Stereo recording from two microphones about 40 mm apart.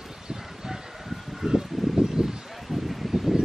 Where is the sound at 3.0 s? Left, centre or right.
Centre.